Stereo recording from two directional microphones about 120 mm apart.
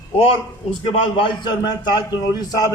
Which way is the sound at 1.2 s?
40° left (ahead or behind).